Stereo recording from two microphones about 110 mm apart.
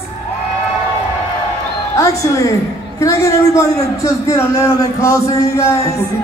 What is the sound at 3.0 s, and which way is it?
A man's voice, 30° left (ahead or behind).